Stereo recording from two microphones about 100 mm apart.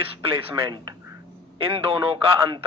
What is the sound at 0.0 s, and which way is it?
Speech, 65° right (ahead or behind).